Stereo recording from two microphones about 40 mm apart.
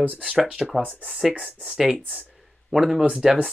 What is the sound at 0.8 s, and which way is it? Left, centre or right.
Speech, right.